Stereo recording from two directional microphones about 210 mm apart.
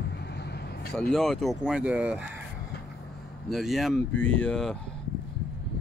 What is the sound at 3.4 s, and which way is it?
Speech, centre (ahead or behind).